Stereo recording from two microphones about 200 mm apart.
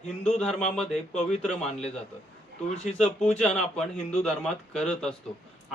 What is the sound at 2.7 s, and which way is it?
Speech, 35° left (ahead or behind).